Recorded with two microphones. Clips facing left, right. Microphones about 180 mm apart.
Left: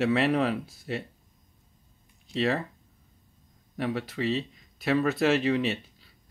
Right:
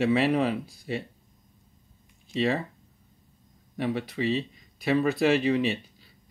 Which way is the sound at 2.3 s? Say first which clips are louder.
Right 1 dB; centre (ahead or behind).